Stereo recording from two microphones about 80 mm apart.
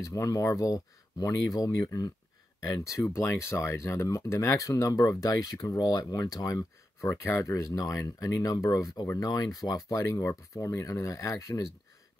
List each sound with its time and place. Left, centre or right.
0.0 s speech: left
3.2 s speech: left